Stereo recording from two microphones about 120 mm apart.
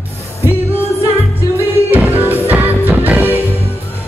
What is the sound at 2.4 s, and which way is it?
Music, 15° right (ahead or behind).